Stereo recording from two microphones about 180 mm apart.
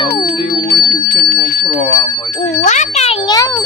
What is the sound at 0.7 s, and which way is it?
Clock, 55° left (ahead or behind).